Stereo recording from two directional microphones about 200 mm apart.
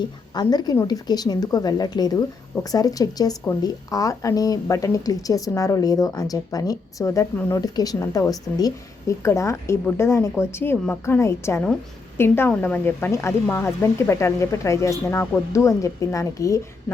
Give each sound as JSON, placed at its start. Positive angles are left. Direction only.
{"t": 0.3, "sound": "a woman's voice", "side_deg": 20}